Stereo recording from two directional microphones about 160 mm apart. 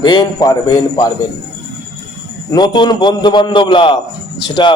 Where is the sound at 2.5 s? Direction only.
25° left (ahead or behind).